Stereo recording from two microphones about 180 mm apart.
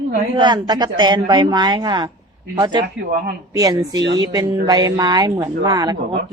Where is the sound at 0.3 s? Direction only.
25° right (ahead or behind).